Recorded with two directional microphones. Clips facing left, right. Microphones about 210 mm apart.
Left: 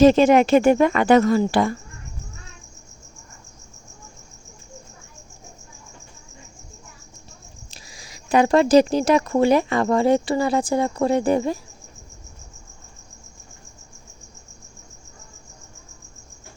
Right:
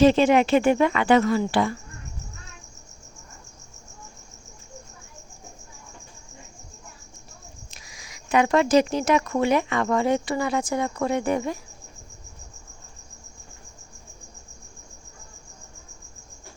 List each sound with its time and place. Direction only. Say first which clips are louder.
0.0 s speech: left 4 dB; 45° left (ahead or behind)
7.7 s speech: left 3 dB; 35° left (ahead or behind)